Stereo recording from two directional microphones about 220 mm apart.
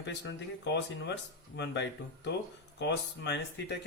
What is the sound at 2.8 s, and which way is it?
Speech, 50° left (ahead or behind).